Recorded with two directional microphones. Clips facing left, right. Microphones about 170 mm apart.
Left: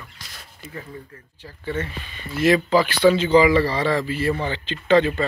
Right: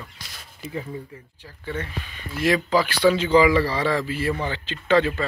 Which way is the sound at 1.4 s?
10° right (ahead or behind).